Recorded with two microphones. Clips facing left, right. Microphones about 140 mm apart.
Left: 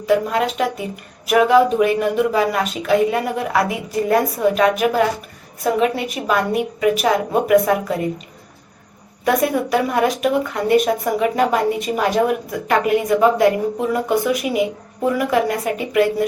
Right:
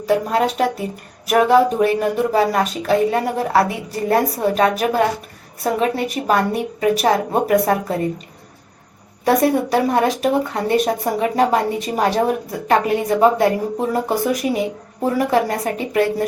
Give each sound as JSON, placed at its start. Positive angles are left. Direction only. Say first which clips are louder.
{"t": 0.0, "sound": "speech", "louder": "even", "side_deg": -35}
{"t": 9.2, "sound": "speech", "louder": "right 2 dB", "side_deg": -35}